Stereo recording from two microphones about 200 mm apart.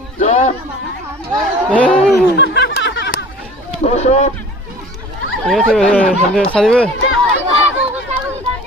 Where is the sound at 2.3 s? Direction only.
60° left (ahead or behind).